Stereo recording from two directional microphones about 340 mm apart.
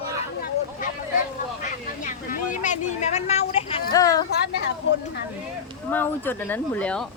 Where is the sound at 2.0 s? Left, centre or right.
Left.